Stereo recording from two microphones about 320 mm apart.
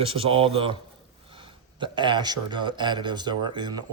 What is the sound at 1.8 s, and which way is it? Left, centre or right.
Speech, centre.